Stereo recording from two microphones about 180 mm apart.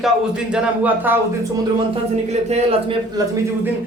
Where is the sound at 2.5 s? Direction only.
30° right (ahead or behind).